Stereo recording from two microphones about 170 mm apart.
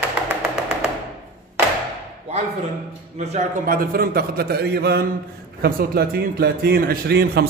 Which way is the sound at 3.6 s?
60° right (ahead or behind).